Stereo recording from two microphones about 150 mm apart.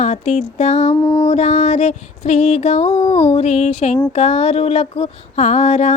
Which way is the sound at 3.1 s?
45° left (ahead or behind).